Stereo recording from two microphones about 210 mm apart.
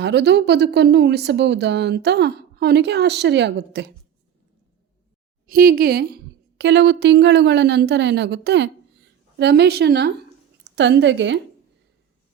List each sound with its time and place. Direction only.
0.0 s a woman's voice: 55° right (ahead or behind)
5.5 s a woman's voice: 45° right (ahead or behind)